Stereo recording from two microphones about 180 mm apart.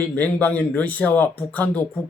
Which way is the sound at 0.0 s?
10° left (ahead or behind).